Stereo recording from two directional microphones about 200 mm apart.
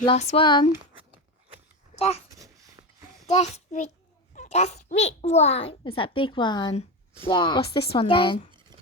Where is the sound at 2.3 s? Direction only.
15° right (ahead or behind).